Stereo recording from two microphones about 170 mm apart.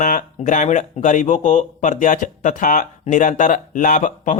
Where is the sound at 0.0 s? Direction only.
50° left (ahead or behind).